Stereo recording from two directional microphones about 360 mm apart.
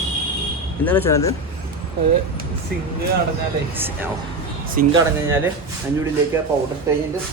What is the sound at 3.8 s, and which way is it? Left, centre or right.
Speech, centre.